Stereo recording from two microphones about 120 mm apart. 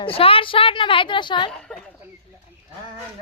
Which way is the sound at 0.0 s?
50° left (ahead or behind).